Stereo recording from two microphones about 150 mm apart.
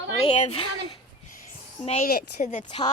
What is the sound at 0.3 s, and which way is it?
Speech, 45° left (ahead or behind).